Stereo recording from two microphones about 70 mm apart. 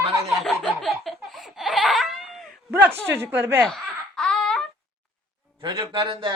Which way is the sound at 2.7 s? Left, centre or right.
Right.